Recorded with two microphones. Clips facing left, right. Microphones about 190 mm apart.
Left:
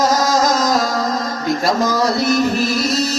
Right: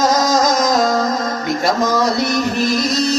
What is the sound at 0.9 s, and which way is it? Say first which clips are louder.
Music: right 3 dB; centre (ahead or behind).